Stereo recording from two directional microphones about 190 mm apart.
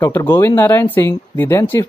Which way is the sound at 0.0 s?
15° left (ahead or behind).